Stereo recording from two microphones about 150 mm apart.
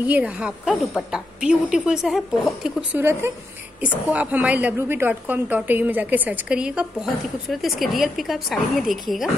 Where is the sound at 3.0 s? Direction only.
15° right (ahead or behind).